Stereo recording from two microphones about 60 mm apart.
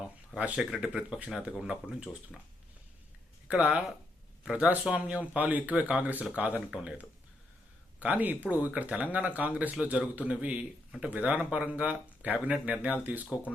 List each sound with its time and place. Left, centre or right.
0.3 s speech: right
3.5 s speech: right